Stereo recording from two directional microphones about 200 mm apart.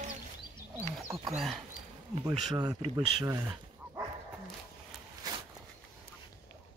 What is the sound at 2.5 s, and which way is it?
Speech, 20° right (ahead or behind).